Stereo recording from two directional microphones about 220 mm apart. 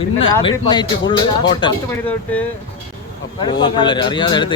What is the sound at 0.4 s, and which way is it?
Speech, 20° left (ahead or behind).